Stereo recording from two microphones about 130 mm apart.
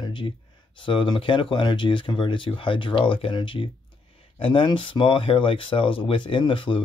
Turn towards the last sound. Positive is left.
turn(degrees=40)  # may be behind; listen again after turning